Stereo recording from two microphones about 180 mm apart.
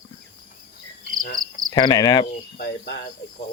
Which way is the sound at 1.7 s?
25° left (ahead or behind).